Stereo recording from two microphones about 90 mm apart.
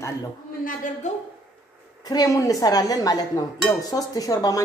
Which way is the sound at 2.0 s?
45° left (ahead or behind).